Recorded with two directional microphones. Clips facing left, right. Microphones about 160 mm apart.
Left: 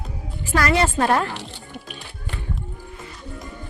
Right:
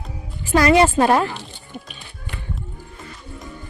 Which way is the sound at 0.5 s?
15° right (ahead or behind).